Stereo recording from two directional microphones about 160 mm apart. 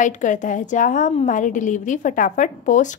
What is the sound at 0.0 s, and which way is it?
A woman's voice, 50° left (ahead or behind).